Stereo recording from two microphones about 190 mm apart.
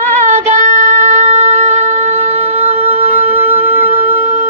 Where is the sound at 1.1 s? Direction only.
35° right (ahead or behind).